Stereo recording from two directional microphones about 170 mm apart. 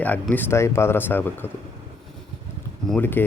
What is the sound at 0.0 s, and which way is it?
Speech, 10° left (ahead or behind).